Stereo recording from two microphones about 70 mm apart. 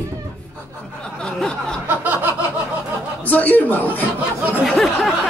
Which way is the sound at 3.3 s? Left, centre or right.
Left.